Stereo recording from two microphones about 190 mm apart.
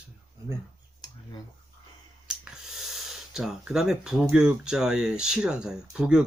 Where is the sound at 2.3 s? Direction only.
5° right (ahead or behind).